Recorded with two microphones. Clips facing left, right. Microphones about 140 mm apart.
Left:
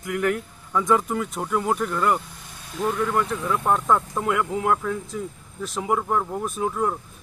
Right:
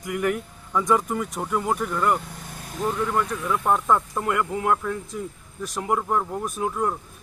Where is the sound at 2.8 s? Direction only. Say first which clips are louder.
Left 1 dB; 15° right (ahead or behind).